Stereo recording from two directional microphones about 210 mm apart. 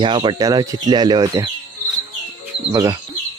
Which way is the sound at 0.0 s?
25° right (ahead or behind).